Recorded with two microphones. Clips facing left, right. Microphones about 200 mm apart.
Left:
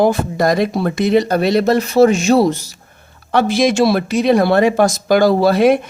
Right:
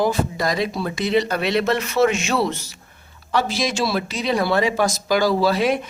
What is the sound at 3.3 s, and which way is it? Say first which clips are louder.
Speech: left 8 dB; 55° left (ahead or behind).